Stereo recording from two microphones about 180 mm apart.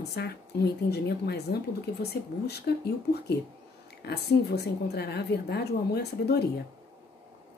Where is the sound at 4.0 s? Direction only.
65° left (ahead or behind).